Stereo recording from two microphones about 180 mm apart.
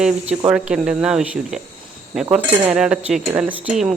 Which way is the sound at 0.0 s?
5° right (ahead or behind).